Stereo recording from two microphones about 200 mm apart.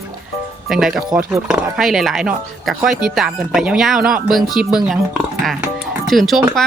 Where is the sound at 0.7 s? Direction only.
Centre (ahead or behind).